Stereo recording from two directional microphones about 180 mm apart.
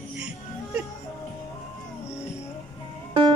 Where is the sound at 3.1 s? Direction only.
30° right (ahead or behind).